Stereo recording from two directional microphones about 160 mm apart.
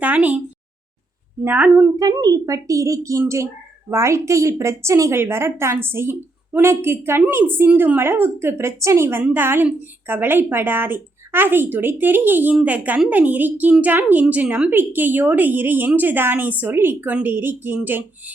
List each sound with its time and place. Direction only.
0.0 s a woman's voice: 10° right (ahead or behind)
1.5 s a woman's voice: 10° right (ahead or behind)
2.0 s a woman's voice: 25° right (ahead or behind)